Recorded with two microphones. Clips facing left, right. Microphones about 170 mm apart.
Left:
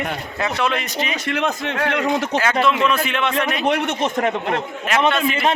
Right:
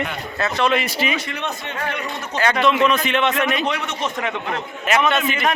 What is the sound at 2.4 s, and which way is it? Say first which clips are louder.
Speech: right 5 dB; 5° left (ahead or behind).